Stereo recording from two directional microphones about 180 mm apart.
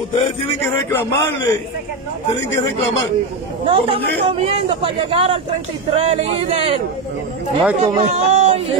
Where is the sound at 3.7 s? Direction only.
30° right (ahead or behind).